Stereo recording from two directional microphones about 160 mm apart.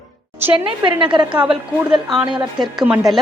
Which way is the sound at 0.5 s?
30° right (ahead or behind).